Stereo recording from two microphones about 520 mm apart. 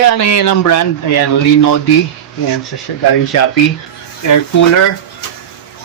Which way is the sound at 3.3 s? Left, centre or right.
Left.